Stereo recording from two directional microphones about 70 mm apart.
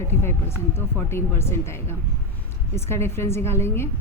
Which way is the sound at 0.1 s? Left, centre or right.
Left.